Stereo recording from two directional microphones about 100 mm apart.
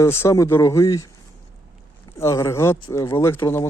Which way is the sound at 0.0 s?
30° left (ahead or behind).